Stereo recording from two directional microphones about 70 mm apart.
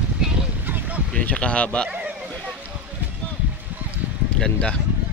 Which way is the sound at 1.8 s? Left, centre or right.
Centre.